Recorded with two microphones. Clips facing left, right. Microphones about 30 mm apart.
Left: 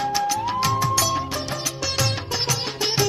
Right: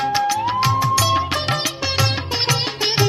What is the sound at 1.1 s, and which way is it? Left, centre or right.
Music, right.